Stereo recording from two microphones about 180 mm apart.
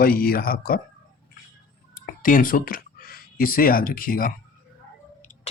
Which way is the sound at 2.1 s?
50° left (ahead or behind).